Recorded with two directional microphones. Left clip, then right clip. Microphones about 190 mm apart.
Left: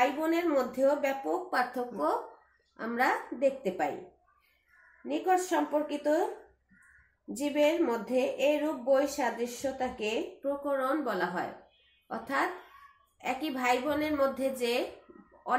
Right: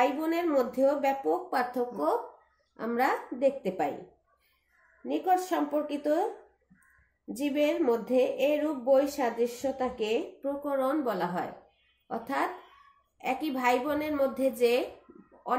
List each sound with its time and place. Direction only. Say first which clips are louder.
0.0 s speech: right 1 dB; 45° right (ahead or behind)
5.0 s speech: right 1 dB; 45° right (ahead or behind)
7.3 s speech: left 1 dB; 45° right (ahead or behind)